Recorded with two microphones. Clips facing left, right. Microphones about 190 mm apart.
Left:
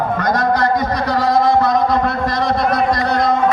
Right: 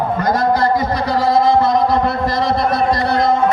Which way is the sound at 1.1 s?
Centre (ahead or behind).